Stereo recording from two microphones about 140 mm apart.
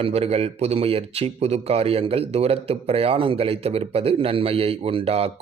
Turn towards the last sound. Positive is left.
turn(degrees=-45)  # may be behind; listen again after turning